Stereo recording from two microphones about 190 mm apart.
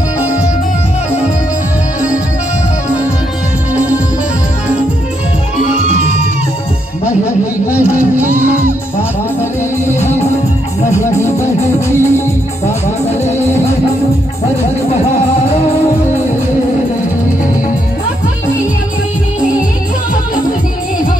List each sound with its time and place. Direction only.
7.2 s a sound: 15° left (ahead or behind)
8.1 s music: 10° right (ahead or behind)
9.9 s music: 35° left (ahead or behind)
10.9 s music: 15° left (ahead or behind)
13.2 s music: 35° left (ahead or behind)